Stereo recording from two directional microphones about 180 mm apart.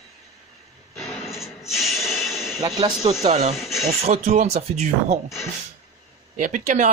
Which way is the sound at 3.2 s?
35° right (ahead or behind).